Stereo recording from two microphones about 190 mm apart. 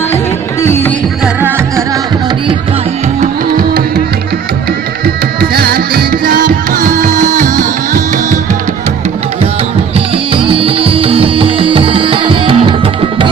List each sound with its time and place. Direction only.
0.6 s music: 10° left (ahead or behind)
1.2 s music: 10° right (ahead or behind)
3.2 s music: 50° right (ahead or behind)
5.0 s music: 55° right (ahead or behind)
10.3 s music: 30° right (ahead or behind)